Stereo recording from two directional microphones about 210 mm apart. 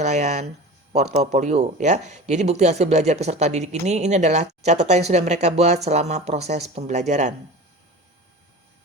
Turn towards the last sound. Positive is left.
turn(degrees=-35)  # may be behind; listen again after turning